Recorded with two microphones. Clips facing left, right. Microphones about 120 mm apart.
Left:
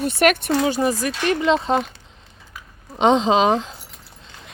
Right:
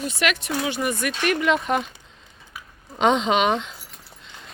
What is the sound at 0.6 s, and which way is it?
Speech, 35° left (ahead or behind).